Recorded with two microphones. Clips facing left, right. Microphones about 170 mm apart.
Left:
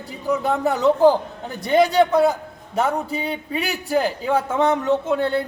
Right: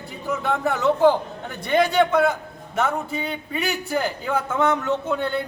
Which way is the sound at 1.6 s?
35° left (ahead or behind).